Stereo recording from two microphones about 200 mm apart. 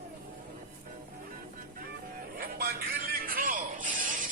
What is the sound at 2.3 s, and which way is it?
Music, 50° right (ahead or behind).